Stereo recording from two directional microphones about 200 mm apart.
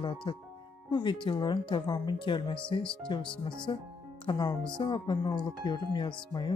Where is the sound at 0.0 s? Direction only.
25° left (ahead or behind).